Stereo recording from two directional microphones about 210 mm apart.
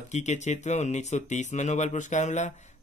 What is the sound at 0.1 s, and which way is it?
Speech, 35° left (ahead or behind).